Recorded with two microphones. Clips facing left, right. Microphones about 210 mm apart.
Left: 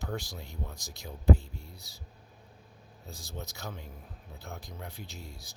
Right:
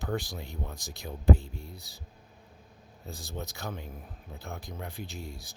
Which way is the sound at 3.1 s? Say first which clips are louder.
Right 4 dB; 55° right (ahead or behind).